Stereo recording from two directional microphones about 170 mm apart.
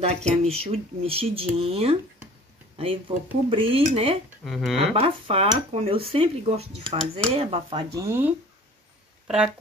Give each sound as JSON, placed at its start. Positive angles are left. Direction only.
{"t": 0.0, "sound": "speech", "side_deg": -40}
{"t": 4.5, "sound": "speech", "side_deg": 0}
{"t": 4.9, "sound": "speech", "side_deg": -35}
{"t": 7.9, "sound": "speech", "side_deg": -15}